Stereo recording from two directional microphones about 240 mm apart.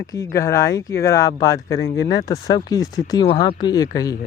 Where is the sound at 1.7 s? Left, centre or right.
Left.